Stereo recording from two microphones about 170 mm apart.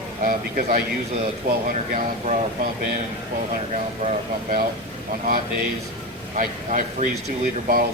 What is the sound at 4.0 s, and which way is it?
Speech, 50° right (ahead or behind).